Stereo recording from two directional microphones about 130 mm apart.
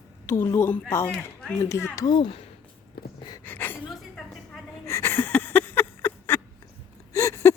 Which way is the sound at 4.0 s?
5° left (ahead or behind).